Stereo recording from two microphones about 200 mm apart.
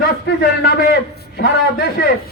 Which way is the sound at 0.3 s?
55° left (ahead or behind).